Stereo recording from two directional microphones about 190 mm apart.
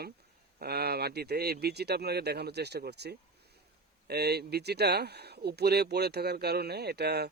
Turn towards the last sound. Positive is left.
turn(degrees=-60)  # may be behind; listen again after turning